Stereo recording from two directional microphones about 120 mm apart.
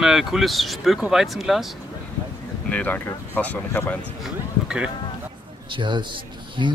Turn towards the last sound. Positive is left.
turn(degrees=-40)  # may be behind; listen again after turning